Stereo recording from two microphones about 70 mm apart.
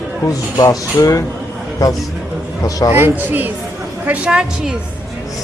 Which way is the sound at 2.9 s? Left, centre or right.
Right.